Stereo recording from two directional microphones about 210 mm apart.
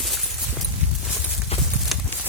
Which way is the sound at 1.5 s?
30° left (ahead or behind).